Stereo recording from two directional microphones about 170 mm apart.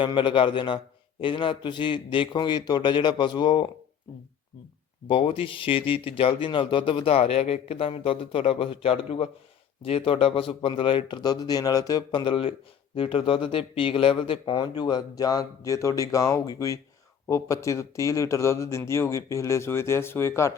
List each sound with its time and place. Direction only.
0.0 s speech: 30° left (ahead or behind)
5.0 s a man's voice: 30° left (ahead or behind); by 20.5 s 15° left (ahead or behind)